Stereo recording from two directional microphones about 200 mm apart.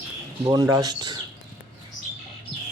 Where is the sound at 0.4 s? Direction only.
20° right (ahead or behind).